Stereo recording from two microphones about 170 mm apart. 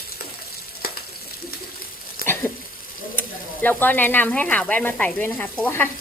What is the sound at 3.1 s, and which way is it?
Speech, 10° left (ahead or behind).